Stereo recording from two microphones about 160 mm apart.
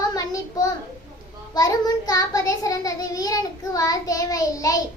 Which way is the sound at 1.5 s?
25° left (ahead or behind).